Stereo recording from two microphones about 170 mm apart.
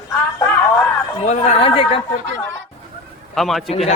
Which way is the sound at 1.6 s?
35° left (ahead or behind).